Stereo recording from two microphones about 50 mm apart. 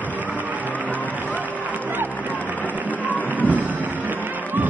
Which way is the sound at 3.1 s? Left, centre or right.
Left.